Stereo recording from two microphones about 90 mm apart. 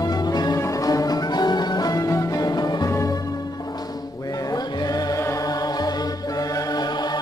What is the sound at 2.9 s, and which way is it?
Music, 35° left (ahead or behind).